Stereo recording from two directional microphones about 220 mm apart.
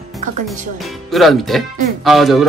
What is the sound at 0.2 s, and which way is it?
Speech, 35° right (ahead or behind).